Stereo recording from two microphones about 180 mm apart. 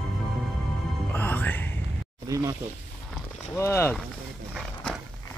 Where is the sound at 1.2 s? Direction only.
10° left (ahead or behind).